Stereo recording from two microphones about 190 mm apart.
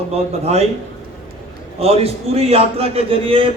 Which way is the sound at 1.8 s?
30° right (ahead or behind).